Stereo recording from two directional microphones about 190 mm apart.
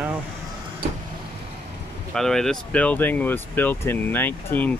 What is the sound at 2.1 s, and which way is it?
Speech, centre (ahead or behind).